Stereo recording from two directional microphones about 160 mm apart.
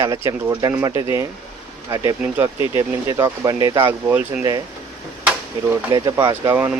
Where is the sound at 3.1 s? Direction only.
25° right (ahead or behind).